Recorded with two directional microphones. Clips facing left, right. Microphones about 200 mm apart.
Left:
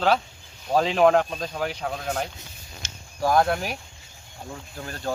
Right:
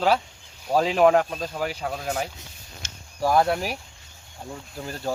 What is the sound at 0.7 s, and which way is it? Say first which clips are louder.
Speech: even; 5° right (ahead or behind).